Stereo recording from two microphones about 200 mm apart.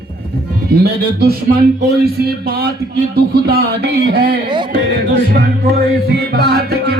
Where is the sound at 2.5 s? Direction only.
50° right (ahead or behind).